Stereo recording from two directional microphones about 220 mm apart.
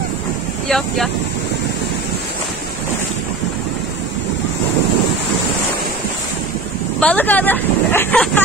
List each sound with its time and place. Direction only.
0.7 s speech: centre (ahead or behind)
7.0 s speech: 5° left (ahead or behind)